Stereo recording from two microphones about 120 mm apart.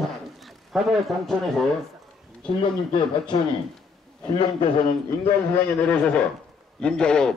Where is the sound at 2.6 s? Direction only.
40° left (ahead or behind).